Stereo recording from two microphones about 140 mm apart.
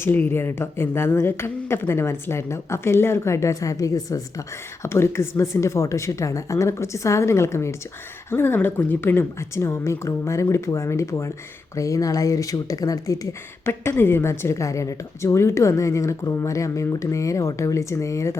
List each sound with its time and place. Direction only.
0.0 s a woman's voice: 15° left (ahead or behind)